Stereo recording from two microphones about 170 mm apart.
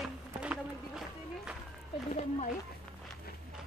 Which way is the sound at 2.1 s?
40° left (ahead or behind).